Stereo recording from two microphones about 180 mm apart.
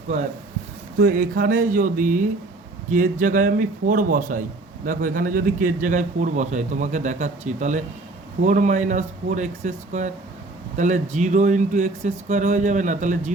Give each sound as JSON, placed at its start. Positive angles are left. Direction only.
{"t": 0.9, "sound": "a man's voice", "side_deg": -55}